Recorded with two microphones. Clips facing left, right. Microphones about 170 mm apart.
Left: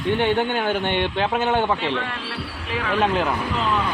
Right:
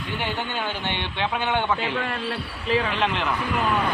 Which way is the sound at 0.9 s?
45° left (ahead or behind).